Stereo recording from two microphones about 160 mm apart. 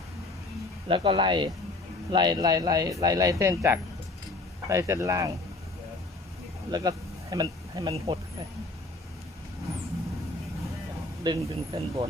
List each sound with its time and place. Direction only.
0.9 s speech: 30° right (ahead or behind)
6.7 s speech: 25° right (ahead or behind)
11.2 s speech: 25° right (ahead or behind)